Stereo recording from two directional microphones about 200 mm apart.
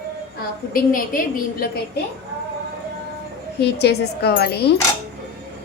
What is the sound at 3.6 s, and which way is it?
Speech, 55° left (ahead or behind).